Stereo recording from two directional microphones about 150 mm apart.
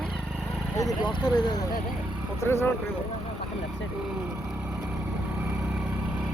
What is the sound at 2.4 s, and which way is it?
Speech, 15° left (ahead or behind).